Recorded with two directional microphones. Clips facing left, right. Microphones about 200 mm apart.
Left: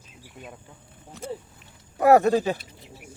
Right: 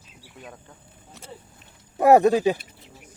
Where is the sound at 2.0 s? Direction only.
20° right (ahead or behind).